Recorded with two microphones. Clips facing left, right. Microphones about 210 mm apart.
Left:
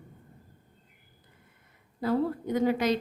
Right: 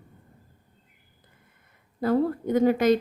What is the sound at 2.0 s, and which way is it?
Speech, 50° right (ahead or behind).